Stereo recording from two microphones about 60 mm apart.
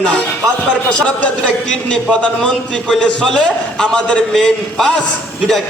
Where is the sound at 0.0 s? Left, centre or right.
Centre.